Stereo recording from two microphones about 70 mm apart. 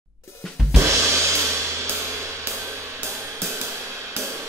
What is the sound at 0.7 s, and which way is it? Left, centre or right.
Music, right.